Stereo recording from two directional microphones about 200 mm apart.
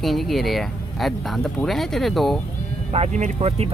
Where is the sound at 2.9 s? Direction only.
35° right (ahead or behind).